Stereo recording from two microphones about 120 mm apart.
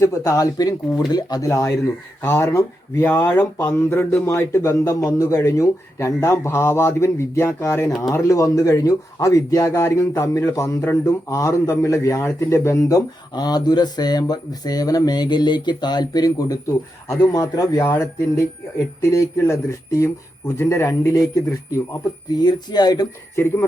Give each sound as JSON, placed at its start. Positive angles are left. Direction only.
{"t": 0.0, "sound": "a man's voice", "side_deg": 25}
{"t": 22.3, "sound": "speech", "side_deg": 35}
{"t": 23.3, "sound": "a man's voice", "side_deg": 20}